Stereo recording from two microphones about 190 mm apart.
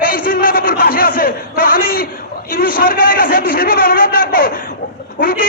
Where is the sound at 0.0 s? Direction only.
50° left (ahead or behind).